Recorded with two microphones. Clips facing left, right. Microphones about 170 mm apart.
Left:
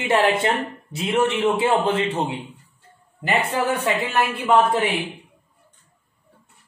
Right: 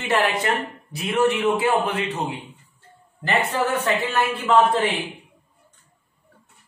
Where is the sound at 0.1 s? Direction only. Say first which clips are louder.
Left 2 dB; 25° left (ahead or behind).